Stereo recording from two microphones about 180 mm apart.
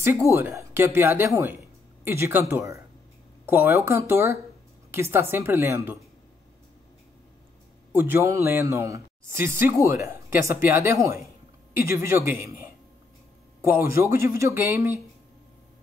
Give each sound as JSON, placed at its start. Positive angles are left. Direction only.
{"t": 0.0, "sound": "speech", "side_deg": -15}
{"t": 7.9, "sound": "speech", "side_deg": -10}